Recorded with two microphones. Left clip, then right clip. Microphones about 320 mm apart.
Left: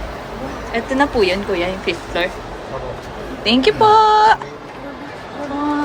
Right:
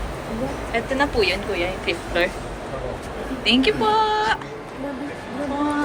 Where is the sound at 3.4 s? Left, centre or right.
Centre.